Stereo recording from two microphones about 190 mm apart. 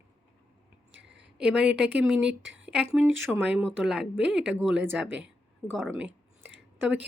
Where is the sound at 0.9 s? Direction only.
70° right (ahead or behind).